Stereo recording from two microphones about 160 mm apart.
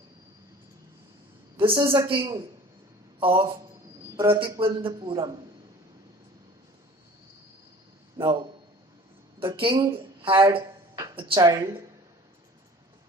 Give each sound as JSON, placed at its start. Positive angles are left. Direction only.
{"t": 1.5, "sound": "a woman's voice", "side_deg": -30}
{"t": 9.6, "sound": "a man's voice", "side_deg": -35}
{"t": 10.5, "sound": "a sound", "side_deg": -20}
{"t": 11.1, "sound": "a woman's voice", "side_deg": -30}